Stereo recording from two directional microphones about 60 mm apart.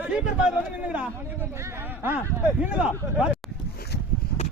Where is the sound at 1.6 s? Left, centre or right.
Right.